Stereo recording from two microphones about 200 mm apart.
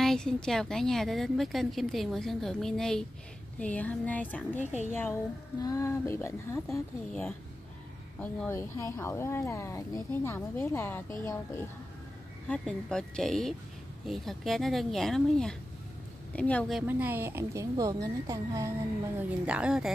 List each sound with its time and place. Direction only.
0.0 s a woman's voice: centre (ahead or behind)
4.6 s a woman's voice: 35° left (ahead or behind)
4.9 s speech: 10° left (ahead or behind)
12.4 s a woman's voice: 5° left (ahead or behind)
16.8 s a woman's voice: 10° right (ahead or behind)